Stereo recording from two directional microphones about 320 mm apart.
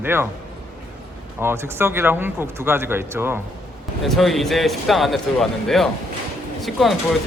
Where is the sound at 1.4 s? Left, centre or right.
Centre.